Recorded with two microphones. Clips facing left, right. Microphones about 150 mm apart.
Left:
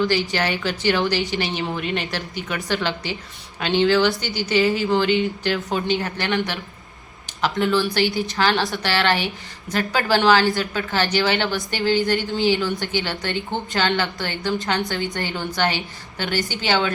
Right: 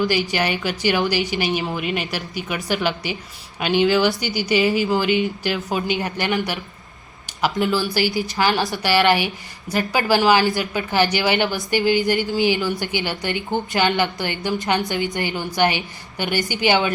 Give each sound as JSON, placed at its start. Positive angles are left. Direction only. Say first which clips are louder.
{"t": 0.0, "sound": "a woman's voice", "louder": "even", "side_deg": -15}
{"t": 5.5, "sound": "a woman's voice", "louder": "even", "side_deg": 0}
{"t": 5.9, "sound": "a woman's voice", "louder": "even", "side_deg": -15}